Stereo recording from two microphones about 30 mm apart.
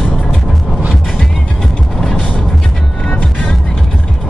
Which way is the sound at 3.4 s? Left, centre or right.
Centre.